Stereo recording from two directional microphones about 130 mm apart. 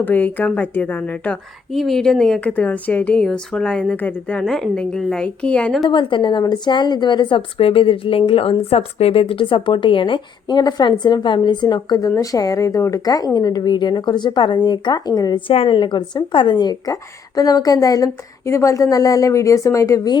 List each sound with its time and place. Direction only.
0.0 s a woman's voice: 15° left (ahead or behind)
5.9 s a woman's voice: 40° left (ahead or behind)
15.4 s speech: 45° left (ahead or behind); by 20.1 s 25° left (ahead or behind)